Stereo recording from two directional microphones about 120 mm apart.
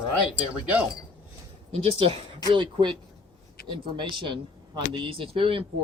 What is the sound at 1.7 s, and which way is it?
Speech, 55° right (ahead or behind).